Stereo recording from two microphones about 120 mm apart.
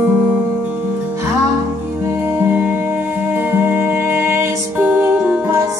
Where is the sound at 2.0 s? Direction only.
20° right (ahead or behind).